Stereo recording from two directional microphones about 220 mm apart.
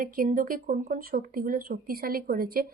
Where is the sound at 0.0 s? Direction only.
40° right (ahead or behind).